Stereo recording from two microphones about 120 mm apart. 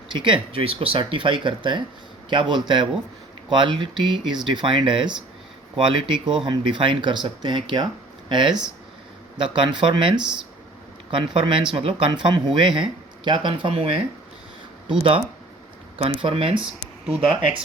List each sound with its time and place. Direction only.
0.1 s speech: 45° right (ahead or behind)